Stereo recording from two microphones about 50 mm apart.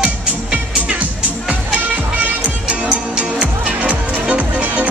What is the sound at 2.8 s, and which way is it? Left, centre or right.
Music, centre.